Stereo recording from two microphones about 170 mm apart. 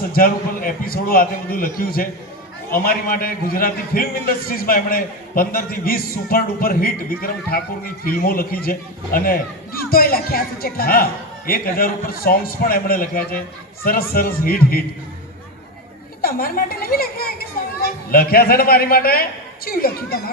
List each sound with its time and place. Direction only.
0.1 s a man's voice: 60° left (ahead or behind)
16.2 s a child's voice: 60° left (ahead or behind)